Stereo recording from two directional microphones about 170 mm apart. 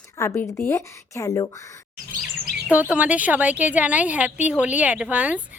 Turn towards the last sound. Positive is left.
turn(degrees=-10)  # may be behind; listen again after turning